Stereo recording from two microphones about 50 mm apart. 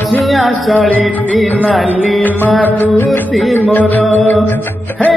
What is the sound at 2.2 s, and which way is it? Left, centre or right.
Music, left.